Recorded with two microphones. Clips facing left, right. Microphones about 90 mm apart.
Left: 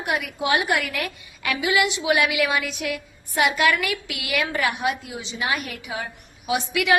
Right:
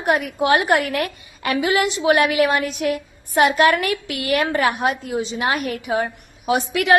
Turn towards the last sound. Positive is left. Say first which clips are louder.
# right 4 dB
turn(degrees=-45)  # may be behind; listen again after turning